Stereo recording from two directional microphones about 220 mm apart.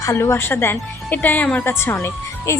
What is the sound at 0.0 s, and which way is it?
A woman's voice, 10° left (ahead or behind).